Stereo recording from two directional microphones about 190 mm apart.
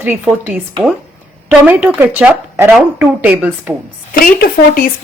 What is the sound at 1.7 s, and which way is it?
A woman's voice, 5° right (ahead or behind).